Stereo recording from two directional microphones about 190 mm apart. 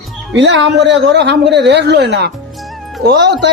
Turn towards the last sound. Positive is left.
turn(degrees=-60)  # may be behind; listen again after turning